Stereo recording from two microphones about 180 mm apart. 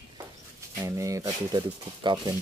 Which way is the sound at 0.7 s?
15° right (ahead or behind).